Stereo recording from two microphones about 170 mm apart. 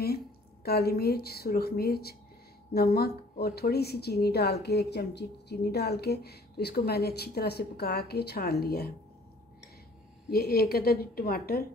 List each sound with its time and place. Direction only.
0.7 s speech: 65° left (ahead or behind)
10.3 s speech: 65° left (ahead or behind)